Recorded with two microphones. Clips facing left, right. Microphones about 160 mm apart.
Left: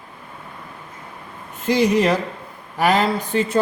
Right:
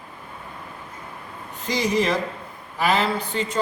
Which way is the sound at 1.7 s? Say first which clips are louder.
Left 5 dB; 65° left (ahead or behind).